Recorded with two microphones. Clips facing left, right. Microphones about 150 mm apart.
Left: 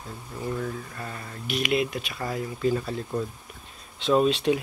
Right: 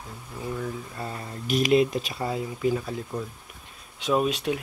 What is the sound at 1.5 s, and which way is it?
Speech, 40° right (ahead or behind).